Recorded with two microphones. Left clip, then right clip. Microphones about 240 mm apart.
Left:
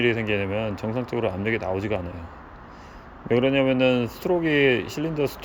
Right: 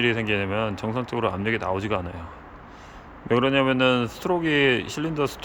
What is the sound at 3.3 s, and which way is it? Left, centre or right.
Speech, centre.